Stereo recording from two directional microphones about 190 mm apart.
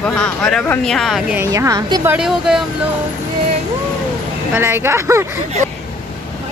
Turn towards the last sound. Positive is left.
turn(degrees=-15)  # may be behind; listen again after turning